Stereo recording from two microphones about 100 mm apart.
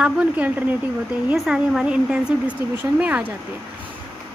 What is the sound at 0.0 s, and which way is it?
Speech, 10° right (ahead or behind).